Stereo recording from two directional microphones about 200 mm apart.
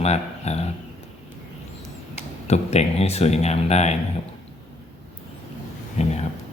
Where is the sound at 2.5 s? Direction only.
30° left (ahead or behind).